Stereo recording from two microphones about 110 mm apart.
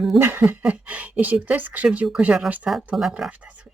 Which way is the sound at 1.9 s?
5° right (ahead or behind).